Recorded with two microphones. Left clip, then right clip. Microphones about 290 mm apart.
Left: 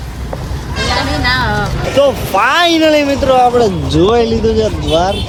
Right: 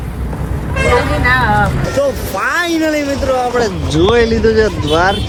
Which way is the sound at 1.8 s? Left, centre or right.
Centre.